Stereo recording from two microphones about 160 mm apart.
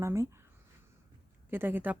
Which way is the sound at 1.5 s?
10° right (ahead or behind).